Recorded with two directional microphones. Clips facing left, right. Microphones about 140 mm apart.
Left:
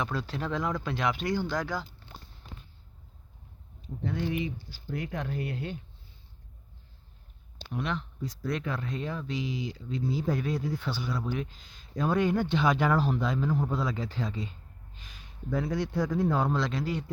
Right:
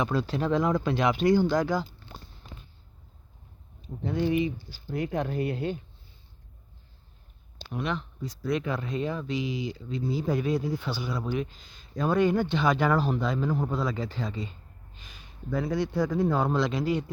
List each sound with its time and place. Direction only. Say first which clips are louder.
0.0 s speech: right 5 dB; 20° right (ahead or behind)
4.1 s speech: right 6 dB; 25° right (ahead or behind)
7.7 s speech: right 2 dB; 5° right (ahead or behind)
16.6 s a man's voice: right 4 dB; 15° right (ahead or behind)